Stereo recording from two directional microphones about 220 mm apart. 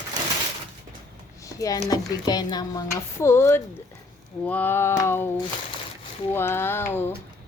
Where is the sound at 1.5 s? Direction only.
15° left (ahead or behind).